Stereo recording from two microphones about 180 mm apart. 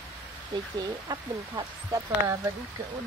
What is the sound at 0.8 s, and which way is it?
A woman's voice, 20° right (ahead or behind).